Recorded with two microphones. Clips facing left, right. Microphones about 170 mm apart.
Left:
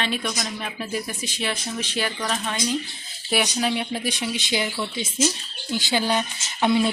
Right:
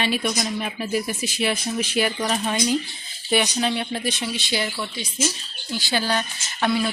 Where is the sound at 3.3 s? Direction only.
5° left (ahead or behind).